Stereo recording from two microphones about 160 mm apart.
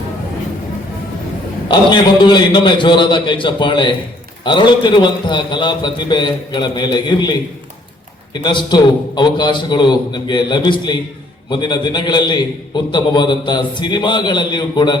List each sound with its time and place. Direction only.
1.6 s a man's voice: 25° left (ahead or behind)